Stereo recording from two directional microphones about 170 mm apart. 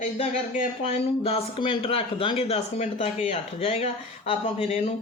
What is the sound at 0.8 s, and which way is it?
Speech, 35° left (ahead or behind).